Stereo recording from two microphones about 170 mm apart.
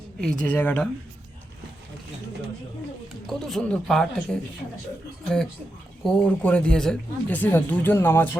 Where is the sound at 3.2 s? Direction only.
Centre (ahead or behind).